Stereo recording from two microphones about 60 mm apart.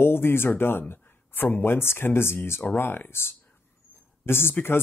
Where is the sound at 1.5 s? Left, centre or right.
Left.